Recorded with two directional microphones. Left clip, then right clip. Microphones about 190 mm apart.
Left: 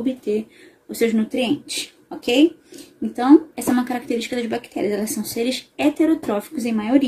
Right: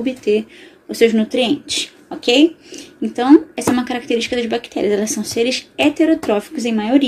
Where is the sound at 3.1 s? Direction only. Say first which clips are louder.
Right 3 dB; 15° left (ahead or behind).